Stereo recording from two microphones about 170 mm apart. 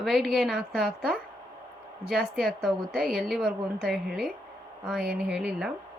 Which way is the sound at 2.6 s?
Centre (ahead or behind).